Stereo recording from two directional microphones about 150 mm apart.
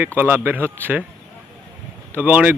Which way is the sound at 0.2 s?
10° right (ahead or behind).